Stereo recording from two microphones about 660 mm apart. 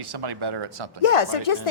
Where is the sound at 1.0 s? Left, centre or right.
Left.